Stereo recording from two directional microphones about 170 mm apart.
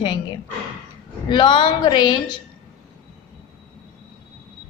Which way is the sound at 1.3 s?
30° left (ahead or behind).